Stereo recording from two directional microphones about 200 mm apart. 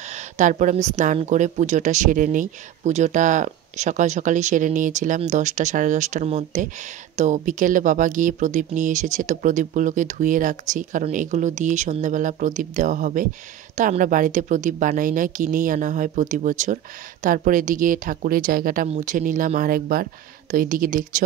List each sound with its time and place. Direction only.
0.1 s a woman's voice: 40° right (ahead or behind)